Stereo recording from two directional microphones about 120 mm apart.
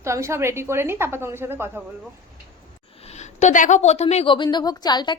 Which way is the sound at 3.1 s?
70° left (ahead or behind).